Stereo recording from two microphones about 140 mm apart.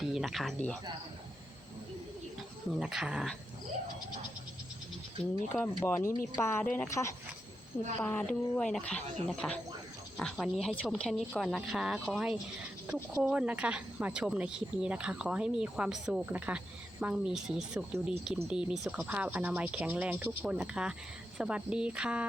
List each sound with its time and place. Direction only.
0.0 s speech: 5° right (ahead or behind)
2.7 s a woman's voice: 5° right (ahead or behind)
5.2 s speech: 15° left (ahead or behind)
8.0 s a woman's voice: 10° left (ahead or behind); by 22.3 s 10° right (ahead or behind)